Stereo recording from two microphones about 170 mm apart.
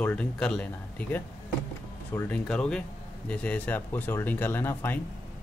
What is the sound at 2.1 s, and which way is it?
Speech, 5° left (ahead or behind).